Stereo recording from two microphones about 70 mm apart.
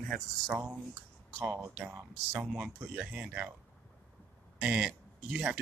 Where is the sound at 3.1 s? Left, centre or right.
Centre.